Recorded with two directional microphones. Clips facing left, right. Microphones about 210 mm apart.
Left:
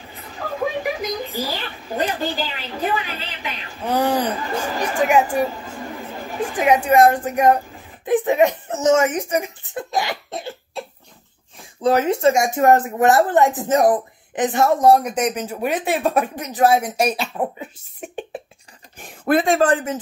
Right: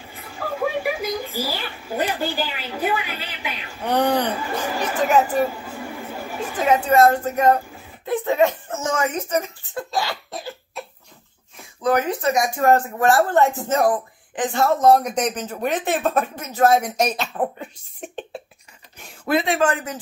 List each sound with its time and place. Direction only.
0.1 s a sound: 10° right (ahead or behind)
1.4 s a woman's voice: 10° right (ahead or behind)
3.8 s speech: 5° left (ahead or behind)
4.4 s a woman's voice: 10° right (ahead or behind)
4.8 s speech: 10° left (ahead or behind)
5.5 s chatter: 10° right (ahead or behind)
6.5 s speech: 15° left (ahead or behind)
11.8 s speech: 25° left (ahead or behind); by 18.2 s 10° left (ahead or behind)
18.9 s speech: 50° left (ahead or behind); by 20.0 s 30° left (ahead or behind)